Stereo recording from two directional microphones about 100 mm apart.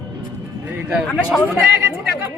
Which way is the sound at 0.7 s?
10° right (ahead or behind).